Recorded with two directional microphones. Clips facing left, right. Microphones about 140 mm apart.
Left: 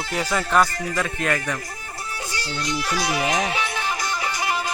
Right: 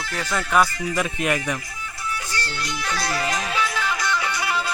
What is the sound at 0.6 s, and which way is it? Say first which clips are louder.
Speech: right 1 dB; 45° left (ahead or behind).